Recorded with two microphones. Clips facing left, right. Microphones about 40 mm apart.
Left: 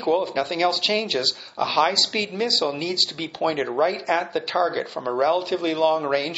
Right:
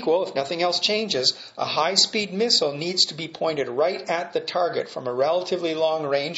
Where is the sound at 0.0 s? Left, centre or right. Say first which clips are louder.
Even; centre.